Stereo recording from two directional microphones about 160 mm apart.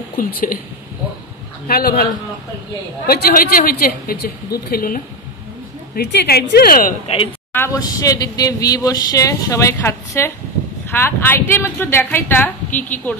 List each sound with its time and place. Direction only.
0.2 s a woman's voice: 60° left (ahead or behind)
1.7 s a woman's voice: 70° left (ahead or behind)
3.1 s a woman's voice: 65° left (ahead or behind)
5.9 s a woman's voice: 80° left; by 7.0 s 60° left (ahead or behind)
7.5 s a woman's voice: 20° left (ahead or behind)